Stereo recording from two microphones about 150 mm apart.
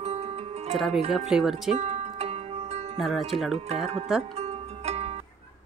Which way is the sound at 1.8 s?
45° right (ahead or behind).